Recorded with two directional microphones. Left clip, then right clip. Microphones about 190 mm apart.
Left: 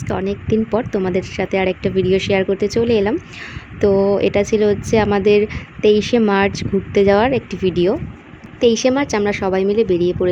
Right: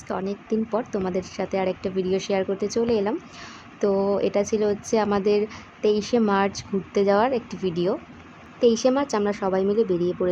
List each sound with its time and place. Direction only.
0.1 s speech: 25° left (ahead or behind)
8.6 s a woman's voice: 15° left (ahead or behind)